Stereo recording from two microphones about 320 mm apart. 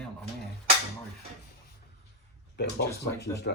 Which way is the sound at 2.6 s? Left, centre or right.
Left.